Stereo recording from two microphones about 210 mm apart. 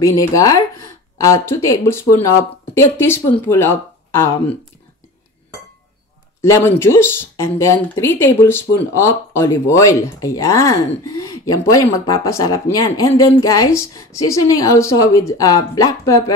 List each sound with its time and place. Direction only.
0.0 s speech: 15° left (ahead or behind)
6.4 s speech: 10° left (ahead or behind)